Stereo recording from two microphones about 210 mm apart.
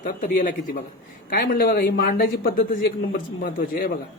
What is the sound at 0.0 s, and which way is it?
A woman's voice, 40° left (ahead or behind).